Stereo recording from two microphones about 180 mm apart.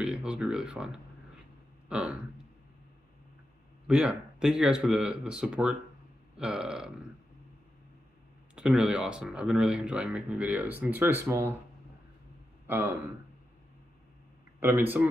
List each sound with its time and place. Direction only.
0.0 s speech: 5° right (ahead or behind)
1.9 s a sound: 5° right (ahead or behind)
3.8 s speech: 5° right (ahead or behind)
8.5 s speech: 5° right (ahead or behind)
12.6 s a man's voice: 15° right (ahead or behind)
14.6 s a man's voice: 10° right (ahead or behind)